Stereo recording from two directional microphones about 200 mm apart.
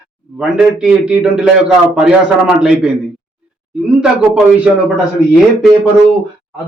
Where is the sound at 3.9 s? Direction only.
5° right (ahead or behind).